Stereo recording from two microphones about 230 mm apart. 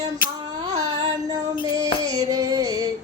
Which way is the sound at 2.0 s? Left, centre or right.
Centre.